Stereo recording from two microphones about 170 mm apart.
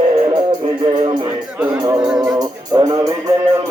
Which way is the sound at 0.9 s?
30° right (ahead or behind).